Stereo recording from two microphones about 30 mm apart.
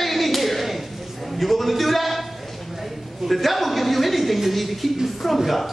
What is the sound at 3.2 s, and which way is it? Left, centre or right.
Speech, centre.